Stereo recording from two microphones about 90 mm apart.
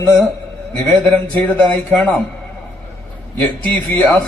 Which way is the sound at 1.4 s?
20° left (ahead or behind).